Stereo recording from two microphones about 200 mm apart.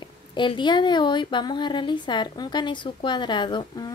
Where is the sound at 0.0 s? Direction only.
25° left (ahead or behind).